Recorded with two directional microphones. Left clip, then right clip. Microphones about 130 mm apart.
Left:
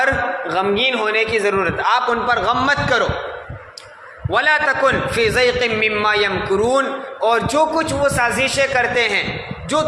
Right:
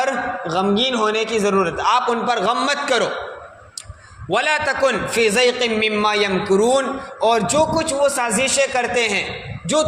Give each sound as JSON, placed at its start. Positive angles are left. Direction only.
{"t": 0.0, "sound": "a man's voice", "side_deg": -40}
{"t": 4.3, "sound": "a man's voice", "side_deg": -40}